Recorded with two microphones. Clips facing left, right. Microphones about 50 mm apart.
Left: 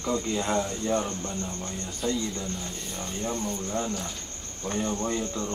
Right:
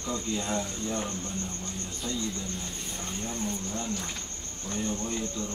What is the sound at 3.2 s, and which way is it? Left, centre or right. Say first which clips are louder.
Speech: left 4 dB; left.